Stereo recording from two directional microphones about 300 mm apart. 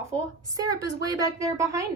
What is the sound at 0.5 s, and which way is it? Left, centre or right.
A woman's voice, centre.